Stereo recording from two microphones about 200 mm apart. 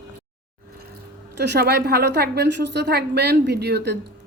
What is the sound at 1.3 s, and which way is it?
A woman's voice, 55° right (ahead or behind).